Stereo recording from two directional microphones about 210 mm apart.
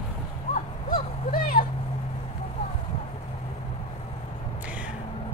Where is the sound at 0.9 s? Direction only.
45° left (ahead or behind).